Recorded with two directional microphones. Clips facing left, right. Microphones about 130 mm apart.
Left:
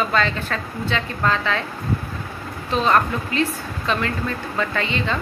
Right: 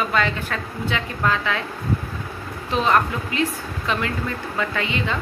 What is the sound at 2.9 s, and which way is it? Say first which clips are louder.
Speech: left 1 dB; 15° right (ahead or behind).